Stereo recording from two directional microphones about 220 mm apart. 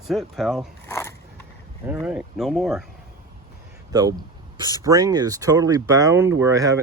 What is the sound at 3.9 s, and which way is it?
Speech, 15° right (ahead or behind).